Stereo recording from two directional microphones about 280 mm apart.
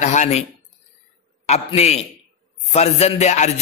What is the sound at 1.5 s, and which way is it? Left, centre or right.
Music, left.